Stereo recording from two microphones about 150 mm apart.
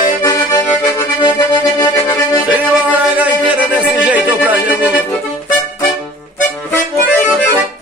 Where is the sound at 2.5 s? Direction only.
10° right (ahead or behind).